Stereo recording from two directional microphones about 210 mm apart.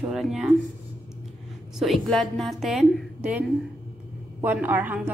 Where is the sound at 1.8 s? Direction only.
Centre (ahead or behind).